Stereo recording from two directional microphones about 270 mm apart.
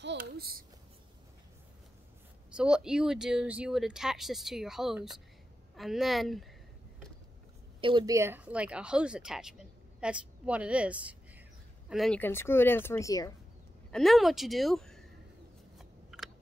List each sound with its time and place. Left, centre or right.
0.0 s babbling: right
2.5 s speech: centre
7.8 s a woman's voice: centre
13.9 s speech: centre
15.8 s a sound: centre